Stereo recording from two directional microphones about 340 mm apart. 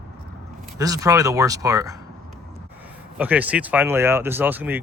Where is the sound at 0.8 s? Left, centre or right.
Centre.